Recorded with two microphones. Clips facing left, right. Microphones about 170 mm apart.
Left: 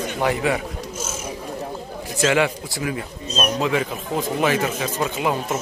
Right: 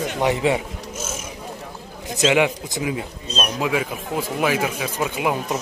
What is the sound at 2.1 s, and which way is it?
Speech, 15° right (ahead or behind).